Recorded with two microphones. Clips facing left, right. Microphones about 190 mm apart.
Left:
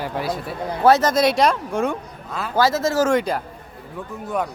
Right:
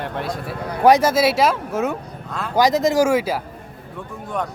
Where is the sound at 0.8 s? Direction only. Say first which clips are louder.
Right 1 dB; 10° right (ahead or behind); by 2.5 s 5° left (ahead or behind).